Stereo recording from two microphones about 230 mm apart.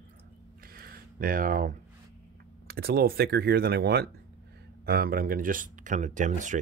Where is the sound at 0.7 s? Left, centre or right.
Right.